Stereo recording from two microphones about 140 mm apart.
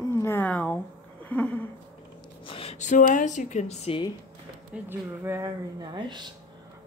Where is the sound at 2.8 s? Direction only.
65° left (ahead or behind).